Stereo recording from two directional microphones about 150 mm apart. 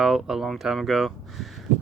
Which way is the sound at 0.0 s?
Centre (ahead or behind).